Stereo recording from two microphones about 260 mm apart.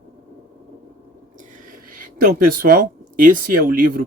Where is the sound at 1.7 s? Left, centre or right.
Right.